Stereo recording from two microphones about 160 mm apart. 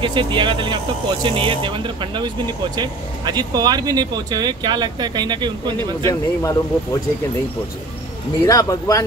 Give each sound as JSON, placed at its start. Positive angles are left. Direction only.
{"t": 0.0, "sound": "speech", "side_deg": -30}
{"t": 6.0, "sound": "speech", "side_deg": 20}
{"t": 8.5, "sound": "speech", "side_deg": 20}